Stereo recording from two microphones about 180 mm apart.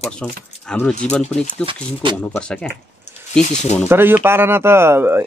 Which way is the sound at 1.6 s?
30° right (ahead or behind).